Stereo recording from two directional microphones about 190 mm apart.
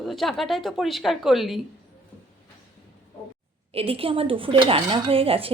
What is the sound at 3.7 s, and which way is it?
Speech, 30° right (ahead or behind).